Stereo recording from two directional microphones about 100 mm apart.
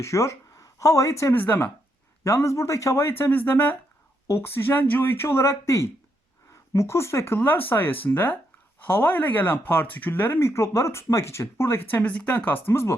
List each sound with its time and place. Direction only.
0.0 s speech: 30° left (ahead or behind)
1.4 s speech: 20° left (ahead or behind)
2.2 s speech: 30° left (ahead or behind)
12.6 s speech: 25° left (ahead or behind)